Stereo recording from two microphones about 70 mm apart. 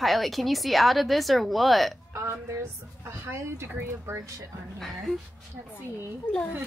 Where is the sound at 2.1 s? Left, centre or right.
Right.